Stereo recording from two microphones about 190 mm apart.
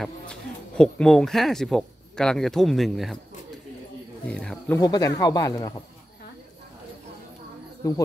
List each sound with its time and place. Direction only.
0.0 s speech: 5° left (ahead or behind)
4.3 s speech: 5° left (ahead or behind)
4.7 s speech: 20° left (ahead or behind)
7.8 s speech: 20° left (ahead or behind)